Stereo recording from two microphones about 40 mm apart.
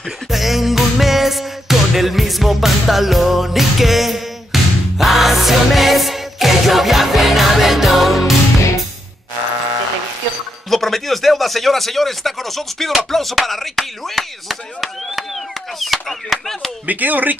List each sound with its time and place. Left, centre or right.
0.3 s music: centre
10.7 s speech: centre
16.8 s speech: right